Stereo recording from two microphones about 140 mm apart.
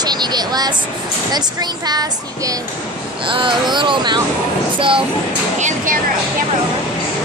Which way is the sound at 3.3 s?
35° right (ahead or behind).